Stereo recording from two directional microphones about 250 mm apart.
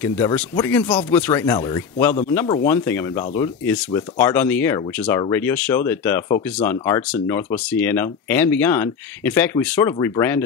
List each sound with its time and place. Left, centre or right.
0.0 s speech: centre